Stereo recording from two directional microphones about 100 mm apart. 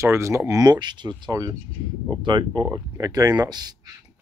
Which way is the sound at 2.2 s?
50° right (ahead or behind).